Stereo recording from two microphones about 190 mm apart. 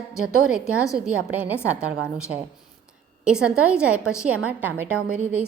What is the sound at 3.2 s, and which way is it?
A woman's voice, 5° right (ahead or behind).